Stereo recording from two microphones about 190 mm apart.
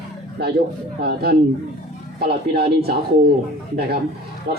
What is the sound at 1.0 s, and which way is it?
A man's voice, 55° right (ahead or behind).